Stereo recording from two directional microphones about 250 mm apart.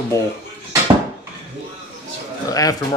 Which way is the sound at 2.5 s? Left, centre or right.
Centre.